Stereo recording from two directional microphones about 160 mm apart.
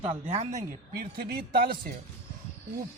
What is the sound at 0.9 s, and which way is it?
Speech, 70° right (ahead or behind).